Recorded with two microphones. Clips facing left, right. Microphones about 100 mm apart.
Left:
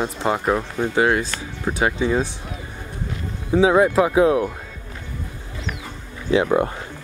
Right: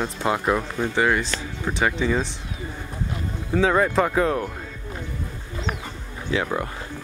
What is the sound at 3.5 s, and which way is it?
Speech, 10° left (ahead or behind).